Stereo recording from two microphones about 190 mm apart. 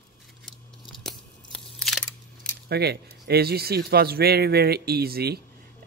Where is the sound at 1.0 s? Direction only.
5° left (ahead or behind).